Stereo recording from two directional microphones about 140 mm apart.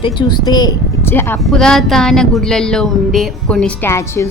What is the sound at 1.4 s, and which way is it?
A woman's voice, centre (ahead or behind).